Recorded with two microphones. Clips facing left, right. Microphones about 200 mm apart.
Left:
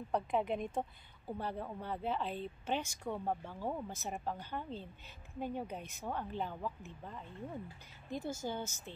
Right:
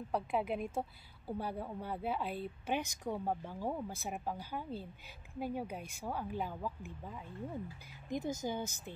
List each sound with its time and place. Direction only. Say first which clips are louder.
0.1 s a woman's voice: left 1 dB; 5° right (ahead or behind)
8.1 s a woman's voice: right 2 dB; 20° right (ahead or behind)